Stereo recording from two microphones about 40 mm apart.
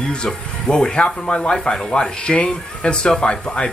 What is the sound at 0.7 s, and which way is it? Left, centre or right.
Speech, centre.